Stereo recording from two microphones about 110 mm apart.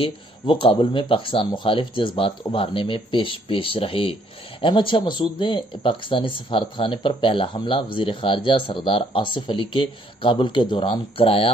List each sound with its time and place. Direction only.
0.0 s speech: 55° left (ahead or behind)